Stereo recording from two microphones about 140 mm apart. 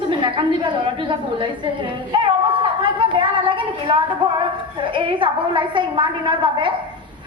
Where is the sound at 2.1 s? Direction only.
35° right (ahead or behind).